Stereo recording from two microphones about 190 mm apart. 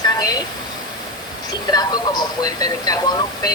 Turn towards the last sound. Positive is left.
turn(degrees=20)  # may be behind; listen again after turning